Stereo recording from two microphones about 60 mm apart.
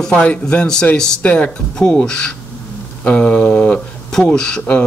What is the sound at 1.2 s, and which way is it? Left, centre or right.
Speech, left.